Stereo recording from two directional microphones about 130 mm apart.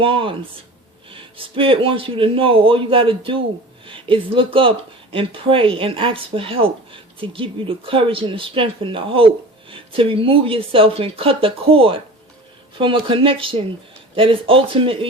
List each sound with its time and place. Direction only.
0.0 s speech: 45° right (ahead or behind)